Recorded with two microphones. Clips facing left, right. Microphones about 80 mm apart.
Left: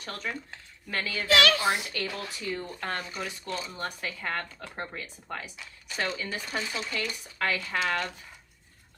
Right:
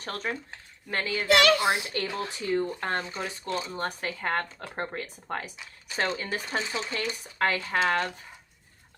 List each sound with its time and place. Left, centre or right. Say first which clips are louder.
0.0 s speech: right 3 dB; right
3.8 s speech: right 3 dB; right
5.5 s speech: right 3 dB; right